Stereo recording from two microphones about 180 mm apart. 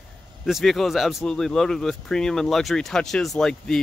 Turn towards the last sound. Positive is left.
turn(degrees=5)  # may be behind; listen again after turning